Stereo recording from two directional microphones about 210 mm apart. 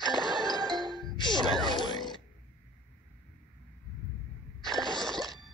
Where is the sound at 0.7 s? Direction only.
Centre (ahead or behind).